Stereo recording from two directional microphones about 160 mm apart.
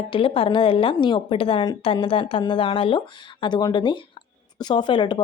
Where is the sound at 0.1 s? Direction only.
35° left (ahead or behind).